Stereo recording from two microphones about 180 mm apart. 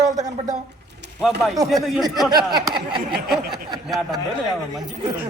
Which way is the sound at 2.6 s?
25° right (ahead or behind).